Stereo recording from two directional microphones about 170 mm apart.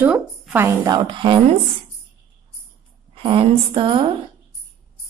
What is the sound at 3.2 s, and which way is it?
Speech, 35° right (ahead or behind).